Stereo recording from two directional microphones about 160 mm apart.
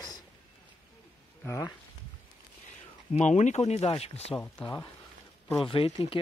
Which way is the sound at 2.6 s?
50° left (ahead or behind).